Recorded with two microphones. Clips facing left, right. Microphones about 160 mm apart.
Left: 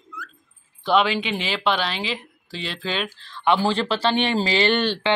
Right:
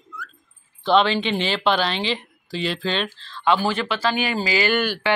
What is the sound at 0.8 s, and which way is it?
Speech, 5° left (ahead or behind).